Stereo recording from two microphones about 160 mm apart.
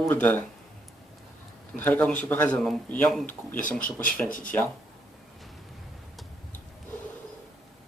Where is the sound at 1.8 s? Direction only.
10° left (ahead or behind).